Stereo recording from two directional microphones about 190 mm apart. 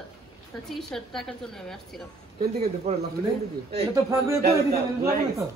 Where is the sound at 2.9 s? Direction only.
35° right (ahead or behind).